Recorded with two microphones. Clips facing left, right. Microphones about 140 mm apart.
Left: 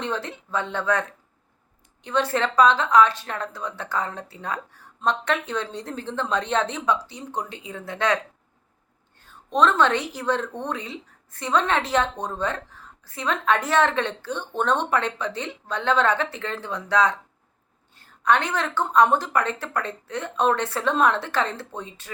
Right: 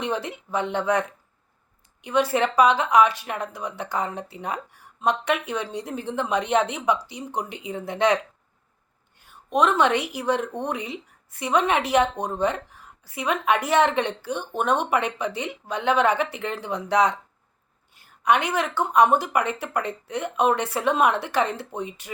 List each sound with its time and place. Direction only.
0.0 s a woman's voice: 15° right (ahead or behind)